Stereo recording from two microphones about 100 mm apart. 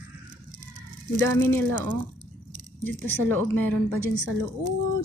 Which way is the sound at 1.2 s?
25° left (ahead or behind).